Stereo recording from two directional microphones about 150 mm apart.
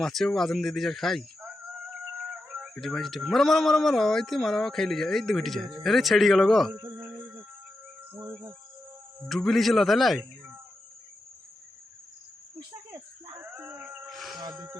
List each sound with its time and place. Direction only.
0.0 s speech: centre (ahead or behind)
6.7 s a sound: 15° right (ahead or behind)
8.1 s cricket: 10° right (ahead or behind)
9.3 s speech: centre (ahead or behind)
13.4 s a sound: 15° right (ahead or behind)
14.2 s insect: centre (ahead or behind)